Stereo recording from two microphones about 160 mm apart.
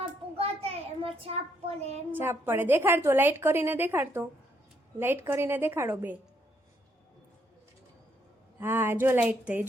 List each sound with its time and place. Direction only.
0.3 s a sound: 40° right (ahead or behind)
2.1 s a woman's voice: 15° right (ahead or behind)
8.5 s a woman's voice: 15° right (ahead or behind)